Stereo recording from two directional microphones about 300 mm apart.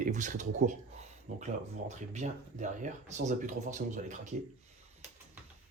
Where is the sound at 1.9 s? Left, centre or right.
Right.